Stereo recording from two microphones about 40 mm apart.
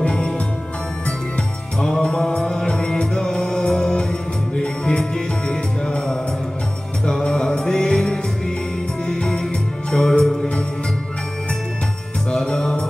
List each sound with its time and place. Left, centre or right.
1.8 s music: centre
12.4 s music: centre